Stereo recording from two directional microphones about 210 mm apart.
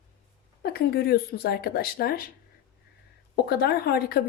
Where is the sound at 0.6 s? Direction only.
50° left (ahead or behind).